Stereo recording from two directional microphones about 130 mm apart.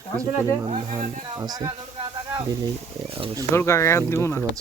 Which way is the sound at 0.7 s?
55° right (ahead or behind).